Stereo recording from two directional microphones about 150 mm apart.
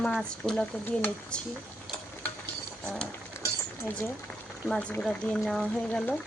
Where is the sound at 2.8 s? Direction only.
5° left (ahead or behind).